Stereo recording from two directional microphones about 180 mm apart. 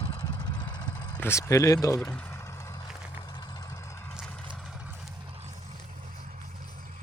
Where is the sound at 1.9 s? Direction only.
5° left (ahead or behind); by 3.7 s 20° left (ahead or behind).